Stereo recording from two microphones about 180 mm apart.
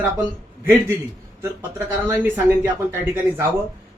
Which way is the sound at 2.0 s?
10° right (ahead or behind).